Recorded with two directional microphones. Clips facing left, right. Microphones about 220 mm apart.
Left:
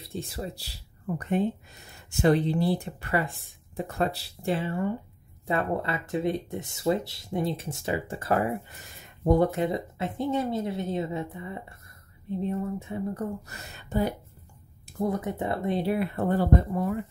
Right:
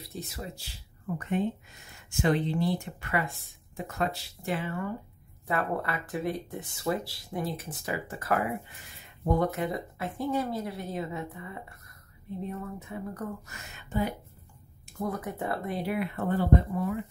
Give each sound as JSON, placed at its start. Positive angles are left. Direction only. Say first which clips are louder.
{"t": 0.0, "sound": "speech", "louder": "left 4 dB", "side_deg": 25}
{"t": 3.3, "sound": "speech", "louder": "even", "side_deg": 0}
{"t": 3.7, "sound": "speech", "louder": "left 3 dB", "side_deg": 35}
{"t": 13.5, "sound": "speech", "louder": "left 3 dB", "side_deg": 35}
{"t": 15.0, "sound": "speech", "louder": "left 4 dB", "side_deg": 25}